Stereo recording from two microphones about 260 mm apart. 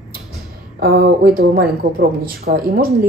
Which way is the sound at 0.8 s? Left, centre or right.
Right.